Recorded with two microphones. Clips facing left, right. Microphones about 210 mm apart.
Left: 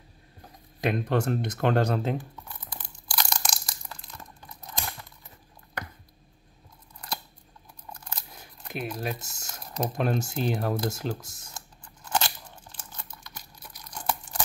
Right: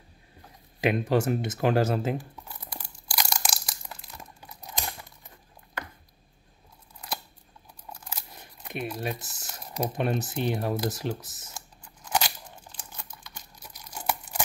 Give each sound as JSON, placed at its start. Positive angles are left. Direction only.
{"t": 0.8, "sound": "speech", "side_deg": -10}
{"t": 2.7, "sound": "crushing", "side_deg": -10}
{"t": 4.2, "sound": "tearing", "side_deg": -15}
{"t": 7.9, "sound": "scissors", "side_deg": -10}
{"t": 8.8, "sound": "speech", "side_deg": -5}
{"t": 13.6, "sound": "tearing", "side_deg": -10}